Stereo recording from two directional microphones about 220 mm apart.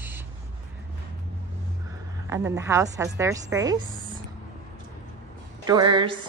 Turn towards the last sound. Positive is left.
turn(degrees=-20)  # may be behind; listen again after turning